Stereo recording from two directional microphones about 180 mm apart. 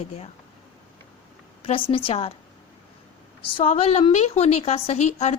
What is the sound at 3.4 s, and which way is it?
A woman's voice, 30° left (ahead or behind).